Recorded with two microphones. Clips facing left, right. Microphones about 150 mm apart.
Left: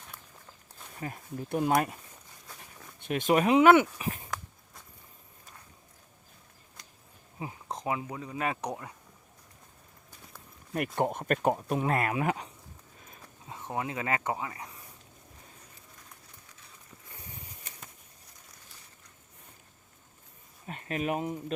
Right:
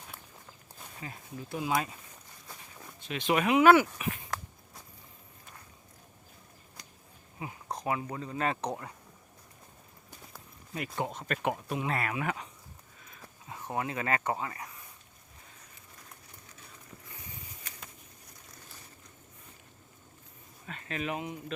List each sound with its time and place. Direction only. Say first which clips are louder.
1.0 s speech: left 5 dB; 50° left (ahead or behind)
2.5 s walk: right 1 dB; 10° right (ahead or behind)
3.0 s speech: left 4 dB; 50° left (ahead or behind)
3.6 s speech: right 1 dB; 20° left (ahead or behind)
6.8 s a sound: right 1 dB; centre (ahead or behind)
7.3 s speech: left 1 dB; 25° left (ahead or behind)
10.8 s speech: left 6 dB; 55° left (ahead or behind); by 12.5 s 35° left (ahead or behind)
13.7 s speech: even; 20° left (ahead or behind)
20.7 s speech: left 4 dB; 35° left (ahead or behind)